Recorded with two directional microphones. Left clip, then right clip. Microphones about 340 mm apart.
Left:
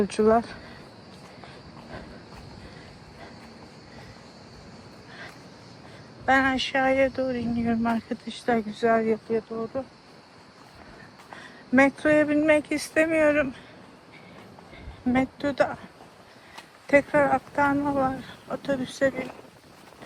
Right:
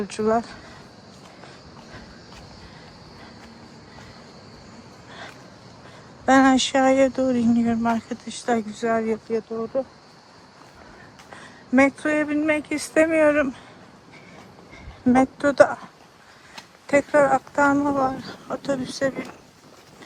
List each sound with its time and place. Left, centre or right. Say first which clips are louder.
0.0 s speech: left 1 dB; centre
6.2 s speech: right 5 dB; centre
9.7 s speech: right 9 dB; centre
11.3 s speech: right 2 dB; centre
15.1 s speech: right 7 dB; centre
16.8 s speech: right 2 dB; centre